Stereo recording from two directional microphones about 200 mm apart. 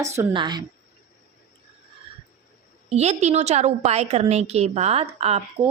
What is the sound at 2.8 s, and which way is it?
A woman's voice, 35° right (ahead or behind).